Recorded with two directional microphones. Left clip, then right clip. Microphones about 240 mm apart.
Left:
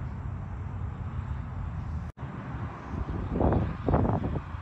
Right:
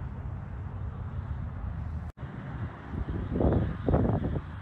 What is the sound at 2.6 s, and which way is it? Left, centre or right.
Vehicle, left.